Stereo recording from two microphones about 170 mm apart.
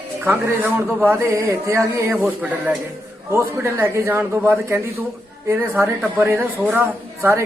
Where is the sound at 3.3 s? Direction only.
15° right (ahead or behind).